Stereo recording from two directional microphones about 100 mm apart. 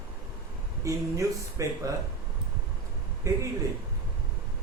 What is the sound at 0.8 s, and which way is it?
Speech, 30° right (ahead or behind).